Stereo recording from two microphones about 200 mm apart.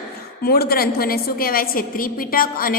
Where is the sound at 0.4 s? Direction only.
50° left (ahead or behind).